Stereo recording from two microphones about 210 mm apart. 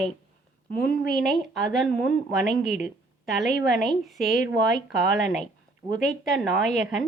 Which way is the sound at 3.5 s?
45° left (ahead or behind).